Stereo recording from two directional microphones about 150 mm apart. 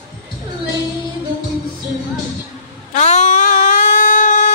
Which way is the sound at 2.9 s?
50° left (ahead or behind).